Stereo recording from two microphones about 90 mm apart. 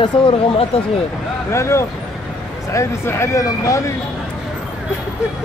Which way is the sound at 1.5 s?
30° left (ahead or behind).